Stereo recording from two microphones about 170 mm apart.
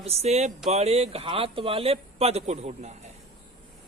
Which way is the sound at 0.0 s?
40° right (ahead or behind).